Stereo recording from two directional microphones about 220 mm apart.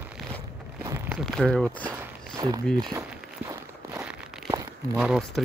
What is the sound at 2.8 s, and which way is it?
Speech, 15° right (ahead or behind).